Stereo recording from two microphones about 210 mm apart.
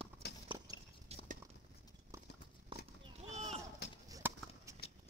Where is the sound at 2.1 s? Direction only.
15° right (ahead or behind).